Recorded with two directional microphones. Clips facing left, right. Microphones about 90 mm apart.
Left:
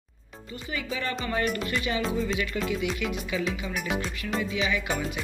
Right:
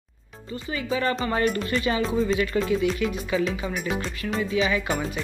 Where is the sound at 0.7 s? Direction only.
35° right (ahead or behind).